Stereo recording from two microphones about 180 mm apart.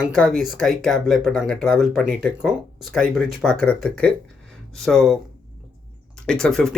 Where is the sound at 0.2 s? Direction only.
Centre (ahead or behind).